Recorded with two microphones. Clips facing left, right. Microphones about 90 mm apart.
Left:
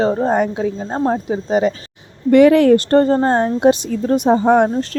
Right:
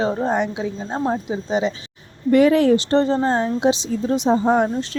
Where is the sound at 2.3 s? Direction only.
70° left (ahead or behind).